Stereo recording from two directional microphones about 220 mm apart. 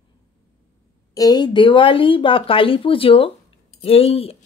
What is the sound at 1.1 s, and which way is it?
Speech, 15° left (ahead or behind).